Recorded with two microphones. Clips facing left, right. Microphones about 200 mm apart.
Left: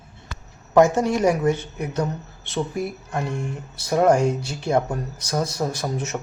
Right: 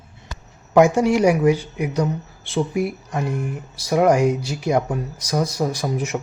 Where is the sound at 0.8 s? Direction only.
15° right (ahead or behind).